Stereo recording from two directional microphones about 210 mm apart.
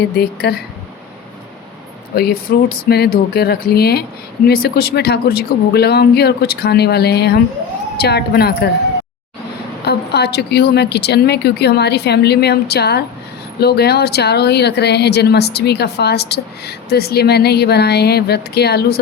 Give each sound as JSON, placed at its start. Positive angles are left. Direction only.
{"t": 0.2, "sound": "speech", "side_deg": 50}
{"t": 2.1, "sound": "speech", "side_deg": 45}
{"t": 9.8, "sound": "speech", "side_deg": 50}